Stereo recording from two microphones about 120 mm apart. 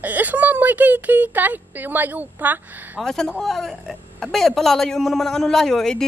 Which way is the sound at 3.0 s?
5° left (ahead or behind).